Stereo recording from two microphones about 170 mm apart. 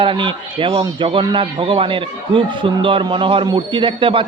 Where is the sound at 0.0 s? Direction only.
30° right (ahead or behind).